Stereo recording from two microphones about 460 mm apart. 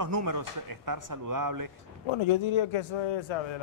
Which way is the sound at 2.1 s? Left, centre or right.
Left.